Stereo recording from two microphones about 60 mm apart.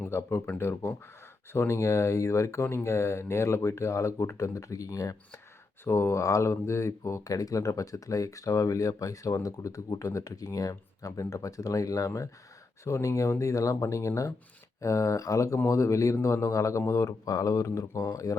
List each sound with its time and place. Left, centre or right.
0.0 s speech: left
1.5 s speech: left
5.8 s speech: left
15.5 s speech: left